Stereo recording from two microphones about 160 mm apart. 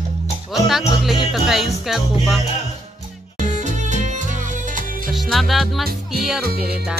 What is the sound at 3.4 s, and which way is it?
Music, 50° right (ahead or behind).